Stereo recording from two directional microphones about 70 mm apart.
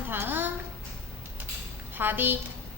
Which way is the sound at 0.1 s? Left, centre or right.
Right.